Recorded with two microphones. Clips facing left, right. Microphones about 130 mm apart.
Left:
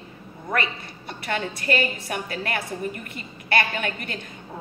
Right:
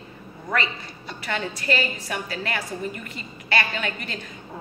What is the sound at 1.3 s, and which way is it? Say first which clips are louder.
A woman's voice: left 1 dB; 50° left (ahead or behind).